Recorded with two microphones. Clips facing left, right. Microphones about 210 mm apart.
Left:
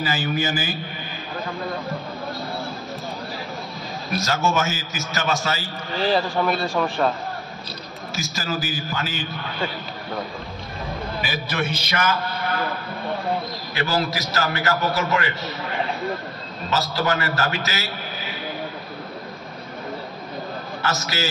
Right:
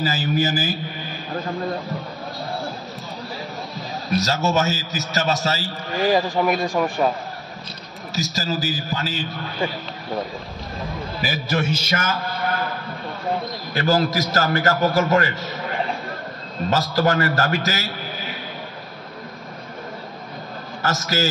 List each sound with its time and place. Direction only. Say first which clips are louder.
0.0 s a man's voice: right 2 dB; 40° right (ahead or behind)
4.2 s a man's voice: right 1 dB; 40° right (ahead or behind)
5.9 s a man's voice: right 2 dB; 15° right (ahead or behind)
8.2 s a man's voice: right 3 dB; 35° right (ahead or behind)
11.1 s a man's voice: right 4 dB; 40° right (ahead or behind)
13.7 s a man's voice: right 5 dB; 45° right (ahead or behind)
16.7 s a man's voice: right 3 dB; 45° right (ahead or behind)
20.8 s a man's voice: right 4 dB; 45° right (ahead or behind)